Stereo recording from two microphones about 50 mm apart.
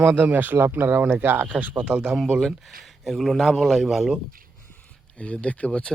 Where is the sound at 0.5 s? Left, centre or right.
Right.